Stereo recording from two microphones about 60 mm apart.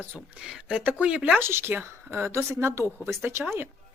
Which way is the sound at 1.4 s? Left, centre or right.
Right.